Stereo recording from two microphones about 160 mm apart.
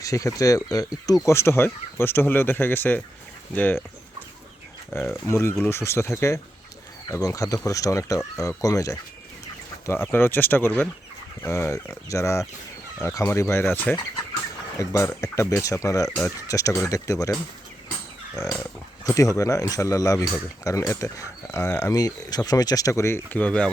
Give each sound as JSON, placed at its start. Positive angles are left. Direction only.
{"t": 0.0, "sound": "speech", "side_deg": 20}
{"t": 4.9, "sound": "speech", "side_deg": 15}
{"t": 10.1, "sound": "speech", "side_deg": 15}
{"t": 19.0, "sound": "speech", "side_deg": 20}